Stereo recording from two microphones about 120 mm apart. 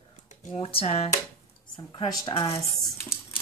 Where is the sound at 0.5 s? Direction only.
55° left (ahead or behind).